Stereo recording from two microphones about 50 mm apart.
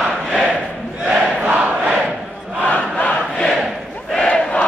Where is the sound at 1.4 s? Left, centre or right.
Right.